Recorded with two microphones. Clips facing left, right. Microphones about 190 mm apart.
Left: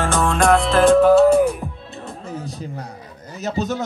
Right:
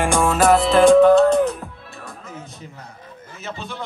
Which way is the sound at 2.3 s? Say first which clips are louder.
Left 7 dB; 35° left (ahead or behind).